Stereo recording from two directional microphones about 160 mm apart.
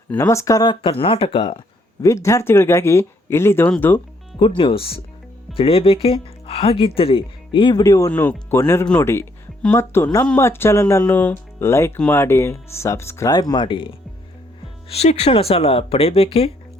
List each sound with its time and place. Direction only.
0.1 s speech: 15° left (ahead or behind); by 1.6 s 35° left (ahead or behind)
2.0 s speech: 20° left (ahead or behind)
4.4 s speech: 30° left (ahead or behind)